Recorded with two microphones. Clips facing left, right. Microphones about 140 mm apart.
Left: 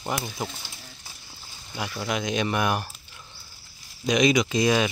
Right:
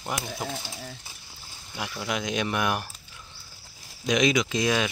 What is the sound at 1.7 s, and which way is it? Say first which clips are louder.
Speech: left 2 dB; centre (ahead or behind).